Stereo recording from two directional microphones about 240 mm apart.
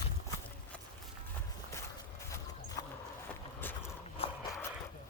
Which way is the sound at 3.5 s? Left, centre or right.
Centre.